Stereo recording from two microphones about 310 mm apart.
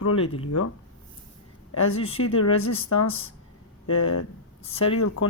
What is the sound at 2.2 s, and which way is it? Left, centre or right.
Speech, left.